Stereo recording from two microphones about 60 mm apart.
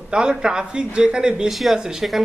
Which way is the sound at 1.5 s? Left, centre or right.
Centre.